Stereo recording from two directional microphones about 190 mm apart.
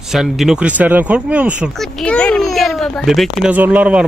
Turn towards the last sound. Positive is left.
turn(degrees=-5)  # may be behind; listen again after turning